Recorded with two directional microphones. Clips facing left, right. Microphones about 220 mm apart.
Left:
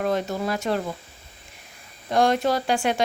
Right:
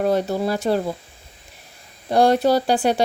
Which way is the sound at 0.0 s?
35° right (ahead or behind).